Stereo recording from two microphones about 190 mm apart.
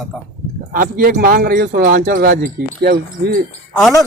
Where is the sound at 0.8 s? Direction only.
50° right (ahead or behind).